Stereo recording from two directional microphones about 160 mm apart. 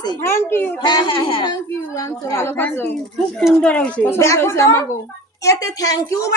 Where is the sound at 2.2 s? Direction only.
15° left (ahead or behind).